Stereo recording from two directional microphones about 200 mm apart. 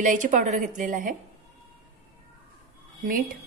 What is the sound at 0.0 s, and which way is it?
A woman's voice, 40° right (ahead or behind).